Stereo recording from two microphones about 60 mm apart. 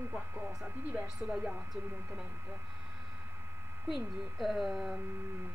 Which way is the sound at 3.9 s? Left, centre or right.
Centre.